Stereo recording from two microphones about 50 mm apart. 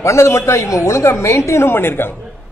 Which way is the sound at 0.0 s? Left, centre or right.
Left.